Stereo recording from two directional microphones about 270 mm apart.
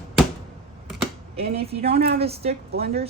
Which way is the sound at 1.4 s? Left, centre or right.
Right.